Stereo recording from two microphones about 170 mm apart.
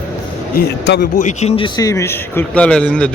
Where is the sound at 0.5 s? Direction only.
80° left.